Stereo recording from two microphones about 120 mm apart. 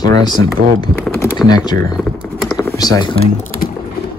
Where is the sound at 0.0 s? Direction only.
35° left (ahead or behind).